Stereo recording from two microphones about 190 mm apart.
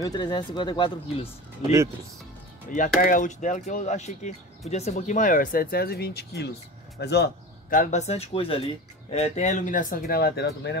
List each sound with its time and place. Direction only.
0.0 s speech: 25° left (ahead or behind)
2.7 s a man's voice: 45° left (ahead or behind); by 7.2 s 60° left (ahead or behind)
7.7 s speech: 40° left (ahead or behind); by 10.8 s 65° left (ahead or behind)